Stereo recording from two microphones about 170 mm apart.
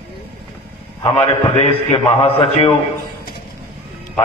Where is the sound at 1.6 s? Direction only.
35° left (ahead or behind).